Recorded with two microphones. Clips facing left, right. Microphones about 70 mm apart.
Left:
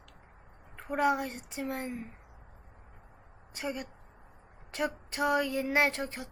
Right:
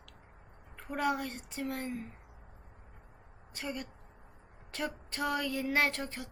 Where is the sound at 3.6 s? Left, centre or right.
Centre.